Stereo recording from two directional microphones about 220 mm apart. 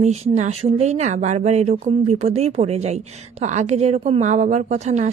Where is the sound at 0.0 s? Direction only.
30° right (ahead or behind).